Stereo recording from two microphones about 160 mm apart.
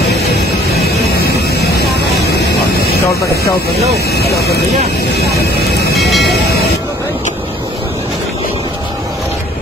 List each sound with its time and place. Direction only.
0.3 s vehicle: 80° left
4.1 s speech: 85° left
5.9 s speech: centre (ahead or behind)
6.2 s speech: 90° left